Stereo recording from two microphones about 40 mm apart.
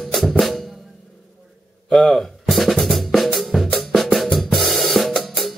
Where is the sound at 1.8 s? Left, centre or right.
Left.